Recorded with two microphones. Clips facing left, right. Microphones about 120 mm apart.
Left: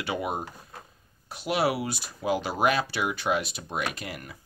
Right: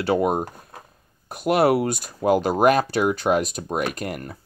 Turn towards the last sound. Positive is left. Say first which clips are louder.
# right 7 dB
turn(degrees=-45)  # may be behind; listen again after turning